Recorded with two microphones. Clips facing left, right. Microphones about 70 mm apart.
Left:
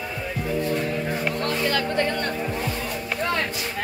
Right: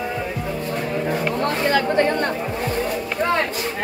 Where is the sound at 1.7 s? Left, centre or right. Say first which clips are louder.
Right 5 dB; right.